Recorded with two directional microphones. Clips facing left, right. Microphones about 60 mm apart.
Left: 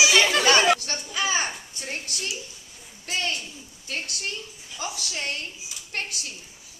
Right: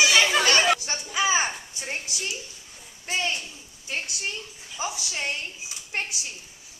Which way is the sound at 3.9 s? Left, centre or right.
Centre.